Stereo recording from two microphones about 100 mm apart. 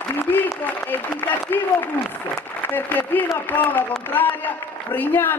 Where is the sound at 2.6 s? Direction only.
20° left (ahead or behind).